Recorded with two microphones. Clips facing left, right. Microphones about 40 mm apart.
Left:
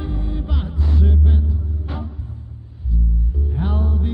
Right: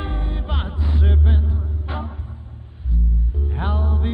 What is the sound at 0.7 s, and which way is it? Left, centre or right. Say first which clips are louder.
Music: left 2 dB; right.